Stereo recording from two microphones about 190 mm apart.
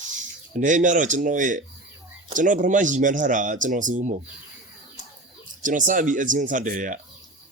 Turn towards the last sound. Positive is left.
turn(degrees=-45)  # may be behind; listen again after turning